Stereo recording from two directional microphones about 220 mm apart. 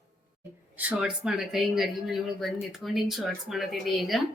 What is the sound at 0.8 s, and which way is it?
Speech, 5° right (ahead or behind).